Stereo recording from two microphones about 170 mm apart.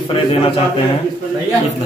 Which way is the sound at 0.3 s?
35° left (ahead or behind).